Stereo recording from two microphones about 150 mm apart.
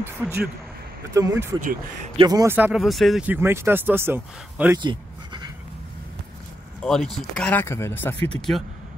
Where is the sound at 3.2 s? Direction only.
15° right (ahead or behind).